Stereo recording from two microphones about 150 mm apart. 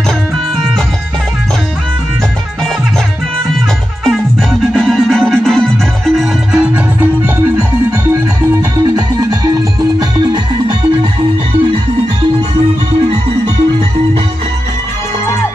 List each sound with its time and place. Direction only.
4.7 s music: centre (ahead or behind)
8.5 s music: 25° right (ahead or behind)